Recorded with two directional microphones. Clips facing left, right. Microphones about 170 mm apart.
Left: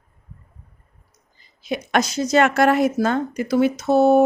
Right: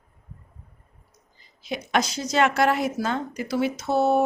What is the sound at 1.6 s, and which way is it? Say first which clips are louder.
A woman's voice: left 4 dB; 50° left (ahead or behind).